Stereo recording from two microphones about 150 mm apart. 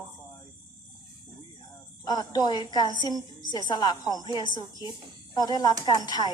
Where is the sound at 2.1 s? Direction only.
25° left (ahead or behind).